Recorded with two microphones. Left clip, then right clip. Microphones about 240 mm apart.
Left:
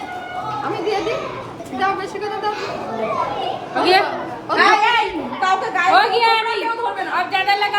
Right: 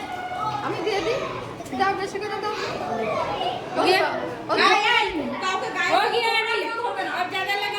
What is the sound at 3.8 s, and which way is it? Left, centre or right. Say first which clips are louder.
Chatter: left 5 dB; left.